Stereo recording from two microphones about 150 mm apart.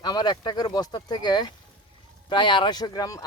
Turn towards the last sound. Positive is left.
turn(degrees=25)  # may be behind; listen again after turning